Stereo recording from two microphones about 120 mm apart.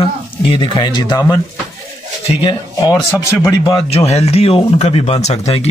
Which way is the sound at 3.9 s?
60° left (ahead or behind).